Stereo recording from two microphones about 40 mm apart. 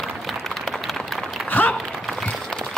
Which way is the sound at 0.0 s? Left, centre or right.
Centre.